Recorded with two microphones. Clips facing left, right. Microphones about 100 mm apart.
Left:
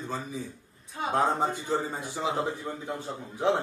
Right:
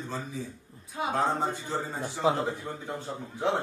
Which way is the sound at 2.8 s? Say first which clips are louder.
Left 1 dB; centre (ahead or behind).